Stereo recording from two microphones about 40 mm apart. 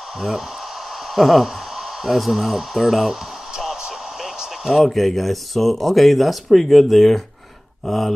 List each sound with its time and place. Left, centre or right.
1.1 s speech: centre
4.4 s a sound: centre
4.8 s speech: centre